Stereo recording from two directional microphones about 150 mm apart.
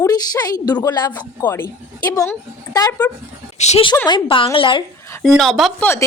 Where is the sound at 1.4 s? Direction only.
15° left (ahead or behind).